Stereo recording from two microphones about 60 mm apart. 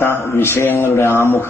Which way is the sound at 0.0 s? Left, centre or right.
Left.